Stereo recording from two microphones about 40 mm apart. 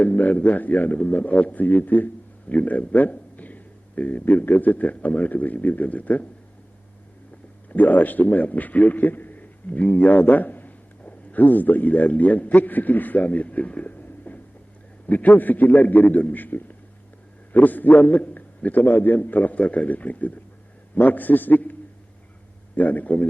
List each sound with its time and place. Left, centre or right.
0.0 s a man's voice: left
7.7 s a man's voice: left